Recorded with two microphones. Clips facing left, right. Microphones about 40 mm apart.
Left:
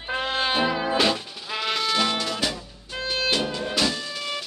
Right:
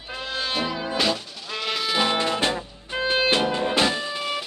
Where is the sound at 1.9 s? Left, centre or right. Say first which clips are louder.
Right 2 dB; centre.